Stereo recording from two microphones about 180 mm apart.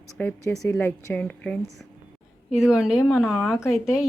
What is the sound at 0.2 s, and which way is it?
A woman's voice, 10° left (ahead or behind).